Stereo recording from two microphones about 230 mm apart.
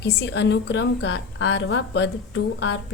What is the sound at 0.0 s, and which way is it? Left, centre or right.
A woman's voice, left.